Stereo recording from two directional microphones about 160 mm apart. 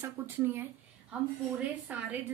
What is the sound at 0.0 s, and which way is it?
Speech, 15° right (ahead or behind).